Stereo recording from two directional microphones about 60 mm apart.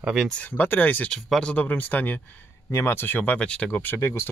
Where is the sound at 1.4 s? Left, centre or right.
Left.